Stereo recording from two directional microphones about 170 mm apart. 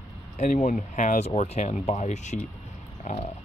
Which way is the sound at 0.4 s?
50° left (ahead or behind).